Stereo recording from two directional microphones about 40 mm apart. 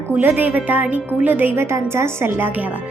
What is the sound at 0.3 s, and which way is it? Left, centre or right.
A woman's voice, right.